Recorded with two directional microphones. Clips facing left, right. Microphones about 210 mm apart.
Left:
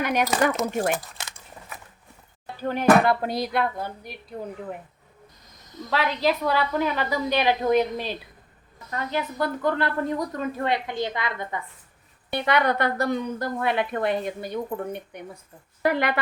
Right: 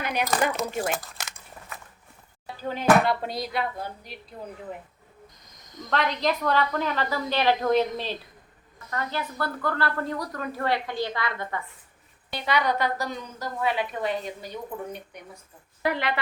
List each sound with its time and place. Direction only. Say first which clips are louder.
0.0 s speech: left 5 dB; 50° left (ahead or behind)
2.6 s a woman's voice: left 3 dB; 55° left (ahead or behind)
5.9 s a woman's voice: left 2 dB; 5° left (ahead or behind)
12.3 s a woman's voice: left 3 dB; 55° left (ahead or behind)